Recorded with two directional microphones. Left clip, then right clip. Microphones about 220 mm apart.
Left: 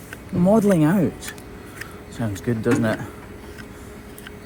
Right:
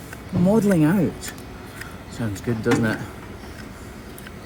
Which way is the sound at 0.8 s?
25° left (ahead or behind).